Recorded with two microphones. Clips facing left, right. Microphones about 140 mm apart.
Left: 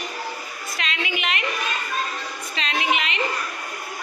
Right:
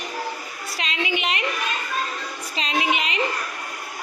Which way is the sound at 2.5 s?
35° right (ahead or behind).